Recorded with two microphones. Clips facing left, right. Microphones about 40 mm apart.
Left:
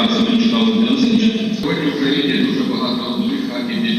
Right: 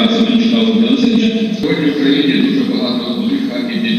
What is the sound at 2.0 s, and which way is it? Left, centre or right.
A man's voice, centre.